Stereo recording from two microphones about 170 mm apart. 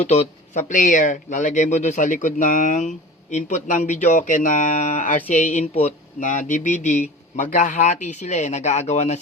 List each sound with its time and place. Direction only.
0.0 s speech: 40° left (ahead or behind)